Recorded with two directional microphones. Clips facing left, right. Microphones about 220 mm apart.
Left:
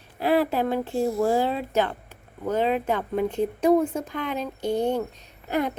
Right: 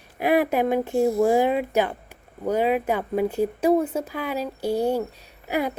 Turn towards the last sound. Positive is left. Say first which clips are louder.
# even
turn(degrees=-10)  # may be behind; listen again after turning